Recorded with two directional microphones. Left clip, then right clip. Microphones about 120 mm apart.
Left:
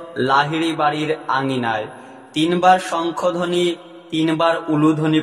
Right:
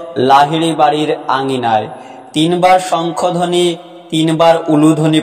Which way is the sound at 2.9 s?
25° right (ahead or behind).